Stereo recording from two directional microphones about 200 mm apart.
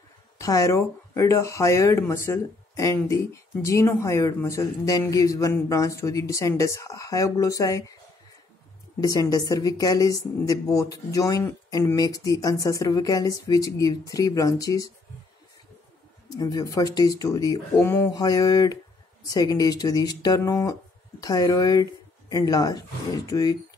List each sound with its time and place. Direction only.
0.4 s a woman's voice: 15° left (ahead or behind)
9.0 s a woman's voice: 15° left (ahead or behind)
16.3 s speech: 20° left (ahead or behind)